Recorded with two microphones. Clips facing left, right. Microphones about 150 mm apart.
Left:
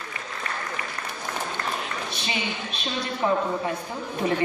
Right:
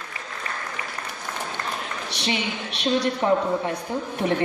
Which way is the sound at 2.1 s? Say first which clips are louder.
Right 6 dB; 75° right (ahead or behind).